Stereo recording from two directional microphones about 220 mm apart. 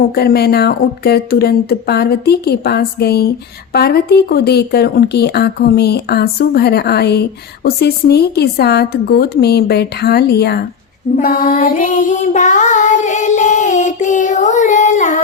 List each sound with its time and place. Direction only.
0.1 s speech: 45° left (ahead or behind)
11.2 s child singing: 40° left (ahead or behind)